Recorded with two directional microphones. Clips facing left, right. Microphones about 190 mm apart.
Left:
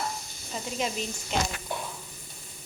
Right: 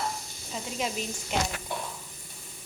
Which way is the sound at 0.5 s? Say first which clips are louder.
Left 1 dB; 5° right (ahead or behind).